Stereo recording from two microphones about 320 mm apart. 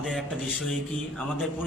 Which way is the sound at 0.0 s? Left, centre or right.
Centre.